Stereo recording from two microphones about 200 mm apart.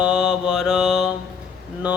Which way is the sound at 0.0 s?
5° right (ahead or behind).